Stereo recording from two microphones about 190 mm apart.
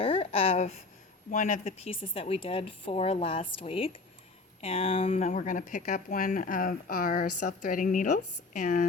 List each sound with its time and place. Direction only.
0.0 s a sound: 30° left (ahead or behind)
1.3 s a woman's voice: 45° left (ahead or behind)
5.1 s speech: 45° left (ahead or behind)